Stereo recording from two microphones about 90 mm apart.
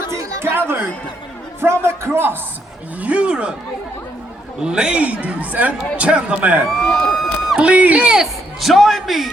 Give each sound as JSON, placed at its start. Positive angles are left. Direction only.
{"t": 0.1, "sound": "chatter", "side_deg": -30}
{"t": 1.6, "sound": "a man's voice", "side_deg": -30}
{"t": 3.0, "sound": "a man's voice", "side_deg": -15}
{"t": 4.6, "sound": "a man's voice", "side_deg": -10}
{"t": 6.7, "sound": "a sound", "side_deg": 5}
{"t": 7.6, "sound": "a man's voice", "side_deg": -15}